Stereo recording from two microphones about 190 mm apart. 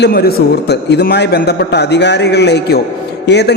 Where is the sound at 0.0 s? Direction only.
55° left (ahead or behind).